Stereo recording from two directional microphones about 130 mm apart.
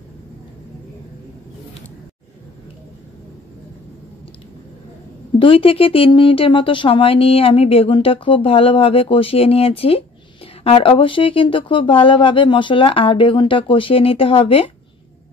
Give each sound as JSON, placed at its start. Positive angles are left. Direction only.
{"t": 5.4, "sound": "speech", "side_deg": 45}